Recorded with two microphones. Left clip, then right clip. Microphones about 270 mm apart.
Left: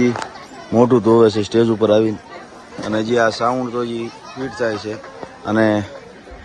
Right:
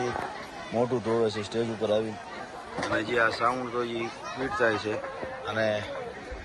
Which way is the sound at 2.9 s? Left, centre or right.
Centre.